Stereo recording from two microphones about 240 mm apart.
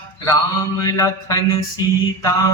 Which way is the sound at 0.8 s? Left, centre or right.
Centre.